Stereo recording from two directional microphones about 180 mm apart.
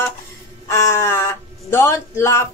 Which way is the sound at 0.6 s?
15° left (ahead or behind).